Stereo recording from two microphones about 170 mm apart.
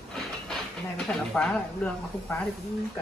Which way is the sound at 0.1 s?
5° left (ahead or behind).